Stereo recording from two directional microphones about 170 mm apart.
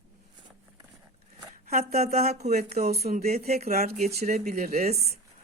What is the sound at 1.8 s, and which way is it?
A woman's voice, 40° right (ahead or behind).